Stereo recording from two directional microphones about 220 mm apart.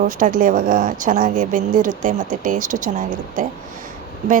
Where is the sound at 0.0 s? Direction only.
35° right (ahead or behind).